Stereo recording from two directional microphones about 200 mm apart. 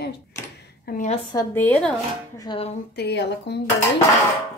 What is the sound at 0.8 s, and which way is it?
Speech, 40° left (ahead or behind).